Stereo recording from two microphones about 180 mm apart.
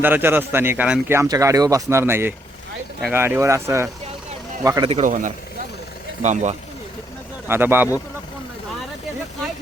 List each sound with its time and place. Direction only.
0.0 s a man's voice: 10° right (ahead or behind)
4.9 s a man's voice: 40° right (ahead or behind)
7.4 s speech: 10° right (ahead or behind)